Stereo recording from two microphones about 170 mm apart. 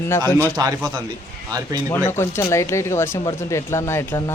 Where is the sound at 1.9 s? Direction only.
15° left (ahead or behind).